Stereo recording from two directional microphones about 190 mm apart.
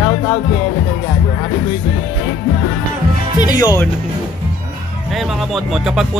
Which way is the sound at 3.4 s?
20° left (ahead or behind).